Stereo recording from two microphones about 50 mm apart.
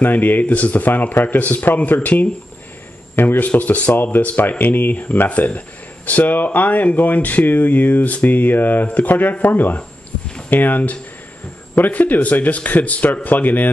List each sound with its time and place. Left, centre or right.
0.0 s speech: left
3.2 s speech: left
5.3 s speech: left